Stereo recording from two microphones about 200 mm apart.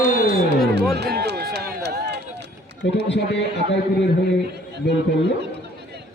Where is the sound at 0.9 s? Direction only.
55° right (ahead or behind).